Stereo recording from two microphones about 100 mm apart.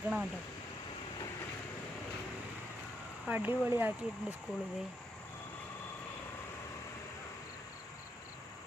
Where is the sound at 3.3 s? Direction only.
15° right (ahead or behind).